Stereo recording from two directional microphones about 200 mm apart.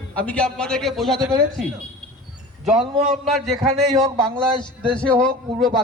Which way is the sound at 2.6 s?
Centre (ahead or behind).